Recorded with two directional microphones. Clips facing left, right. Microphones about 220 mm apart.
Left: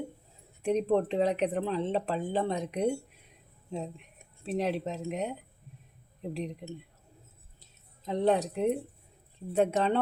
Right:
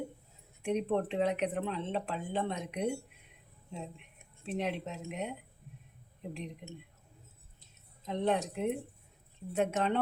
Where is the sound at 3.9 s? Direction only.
35° left (ahead or behind).